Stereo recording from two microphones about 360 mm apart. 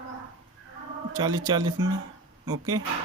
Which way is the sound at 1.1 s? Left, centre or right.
Centre.